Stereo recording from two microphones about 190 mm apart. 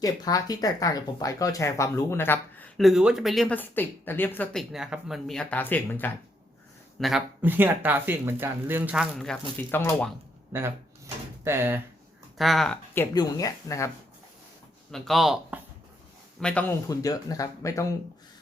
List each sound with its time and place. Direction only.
0.0 s speech: 20° left (ahead or behind)
4.7 s speech: centre (ahead or behind)
7.0 s speech: 5° right (ahead or behind)
10.5 s door: 15° right (ahead or behind)
12.4 s speech: centre (ahead or behind); by 13.9 s 15° left (ahead or behind)
14.9 s speech: centre (ahead or behind)
16.4 s speech: 5° left (ahead or behind)
16.9 s speech: 20° left (ahead or behind)